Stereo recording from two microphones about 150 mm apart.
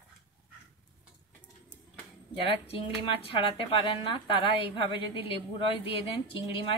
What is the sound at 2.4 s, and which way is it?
A woman's voice, 40° left (ahead or behind).